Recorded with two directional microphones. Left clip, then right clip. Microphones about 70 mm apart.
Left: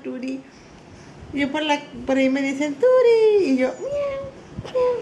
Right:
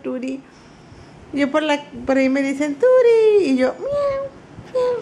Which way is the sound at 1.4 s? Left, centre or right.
Right.